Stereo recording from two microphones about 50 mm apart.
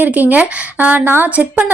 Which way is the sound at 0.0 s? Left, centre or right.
Right.